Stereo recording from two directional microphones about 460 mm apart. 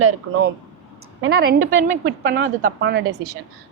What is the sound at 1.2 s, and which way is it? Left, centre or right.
A woman's voice, centre.